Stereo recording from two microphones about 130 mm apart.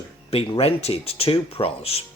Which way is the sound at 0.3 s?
50° left (ahead or behind).